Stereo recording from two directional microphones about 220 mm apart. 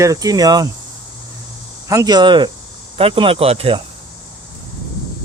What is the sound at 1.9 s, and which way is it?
Speech, 15° right (ahead or behind).